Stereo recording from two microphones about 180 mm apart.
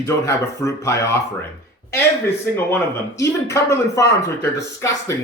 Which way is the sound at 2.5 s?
15° left (ahead or behind).